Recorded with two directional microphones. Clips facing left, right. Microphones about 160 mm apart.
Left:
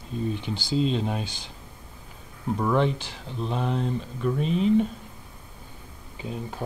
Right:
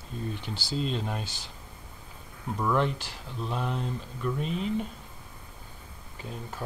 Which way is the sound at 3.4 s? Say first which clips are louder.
Left 4 dB; 25° left (ahead or behind).